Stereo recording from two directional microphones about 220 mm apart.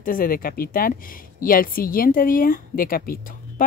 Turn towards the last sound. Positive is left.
turn(degrees=40)  # may be behind; listen again after turning